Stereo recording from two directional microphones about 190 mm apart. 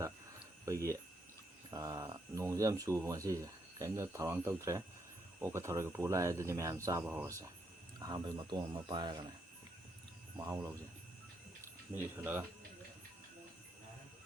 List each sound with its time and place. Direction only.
0.6 s speech: 15° right (ahead or behind)
10.3 s speech: 20° right (ahead or behind)
11.9 s speech: 10° right (ahead or behind)